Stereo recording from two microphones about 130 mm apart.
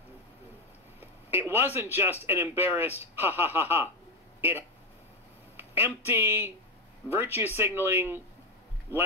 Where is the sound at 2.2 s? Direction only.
15° right (ahead or behind).